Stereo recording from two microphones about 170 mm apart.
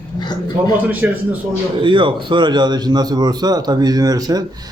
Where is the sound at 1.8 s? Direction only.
30° right (ahead or behind).